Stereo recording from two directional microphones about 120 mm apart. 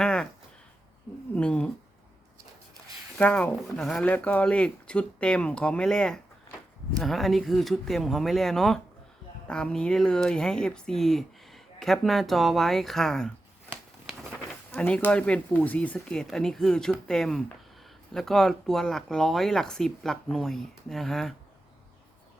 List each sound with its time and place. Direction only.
0.0 s a sound: 5° left (ahead or behind)
1.4 s speech: 10° left (ahead or behind)
3.2 s speech: 10° left (ahead or behind)
14.8 s speech: 10° left (ahead or behind)